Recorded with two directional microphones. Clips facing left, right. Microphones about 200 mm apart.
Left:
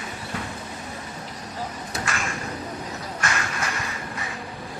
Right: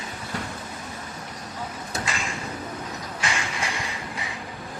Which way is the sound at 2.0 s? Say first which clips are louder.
Left 3 dB; 15° right (ahead or behind).